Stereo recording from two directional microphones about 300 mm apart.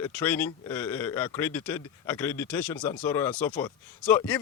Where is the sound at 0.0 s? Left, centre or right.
Centre.